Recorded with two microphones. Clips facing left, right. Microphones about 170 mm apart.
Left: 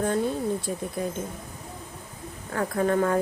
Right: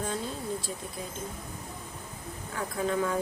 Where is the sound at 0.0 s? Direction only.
55° left (ahead or behind).